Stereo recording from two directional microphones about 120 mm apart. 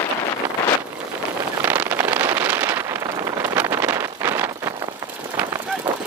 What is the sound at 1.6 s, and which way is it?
Vehicle, 15° right (ahead or behind).